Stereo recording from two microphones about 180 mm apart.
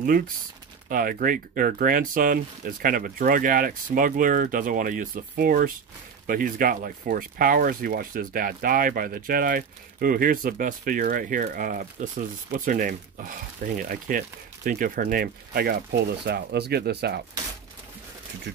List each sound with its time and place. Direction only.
0.8 s speech: 50° right (ahead or behind)